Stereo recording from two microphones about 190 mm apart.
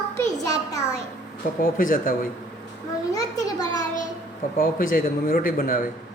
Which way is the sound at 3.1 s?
20° left (ahead or behind).